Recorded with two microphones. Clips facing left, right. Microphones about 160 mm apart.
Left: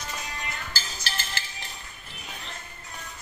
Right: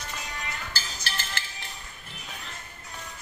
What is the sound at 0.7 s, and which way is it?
Music, 60° right (ahead or behind).